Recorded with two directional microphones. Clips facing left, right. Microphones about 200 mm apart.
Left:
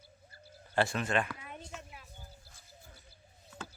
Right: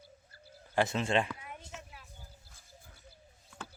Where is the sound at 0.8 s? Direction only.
25° right (ahead or behind).